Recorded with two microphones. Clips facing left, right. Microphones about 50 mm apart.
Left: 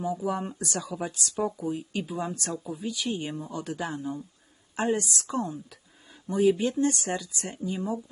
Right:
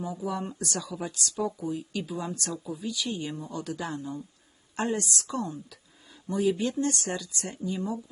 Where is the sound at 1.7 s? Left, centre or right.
Left.